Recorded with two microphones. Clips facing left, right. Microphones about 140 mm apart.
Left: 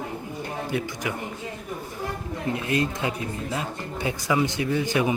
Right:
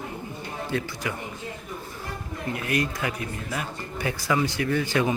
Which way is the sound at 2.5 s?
25° left (ahead or behind).